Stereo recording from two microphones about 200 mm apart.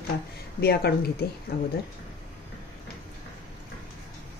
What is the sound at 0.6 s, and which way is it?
Speech, 55° left (ahead or behind).